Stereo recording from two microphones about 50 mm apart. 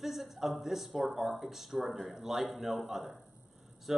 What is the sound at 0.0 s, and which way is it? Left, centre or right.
Speech, centre.